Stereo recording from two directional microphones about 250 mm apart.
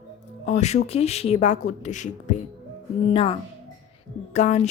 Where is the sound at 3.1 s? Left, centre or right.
Left.